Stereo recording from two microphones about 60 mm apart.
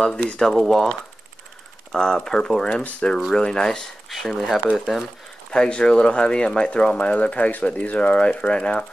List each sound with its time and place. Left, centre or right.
0.0 s speech: centre
0.5 s speech: centre
2.0 s speech: centre
5.5 s speech: centre